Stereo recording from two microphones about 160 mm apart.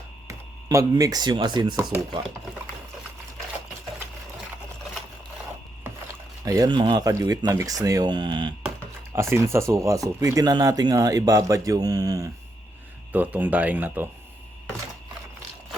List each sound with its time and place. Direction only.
0.3 s speech: 20° right (ahead or behind)
6.4 s speech: 25° right (ahead or behind)
9.1 s speech: 15° right (ahead or behind)
13.1 s speech: 10° right (ahead or behind)